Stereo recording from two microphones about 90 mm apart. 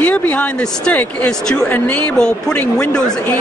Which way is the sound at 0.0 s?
20° left (ahead or behind).